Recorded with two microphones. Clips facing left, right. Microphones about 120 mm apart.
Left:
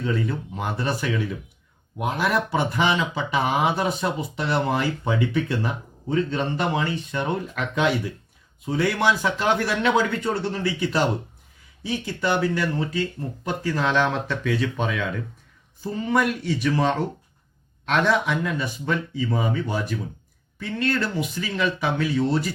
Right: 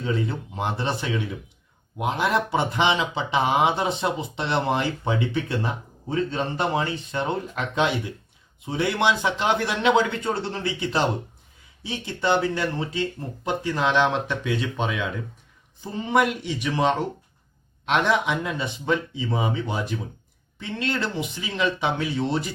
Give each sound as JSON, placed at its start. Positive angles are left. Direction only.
{"t": 0.0, "sound": "speech", "side_deg": -25}